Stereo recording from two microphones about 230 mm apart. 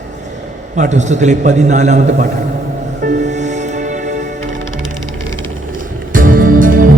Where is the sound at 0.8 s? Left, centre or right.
Right.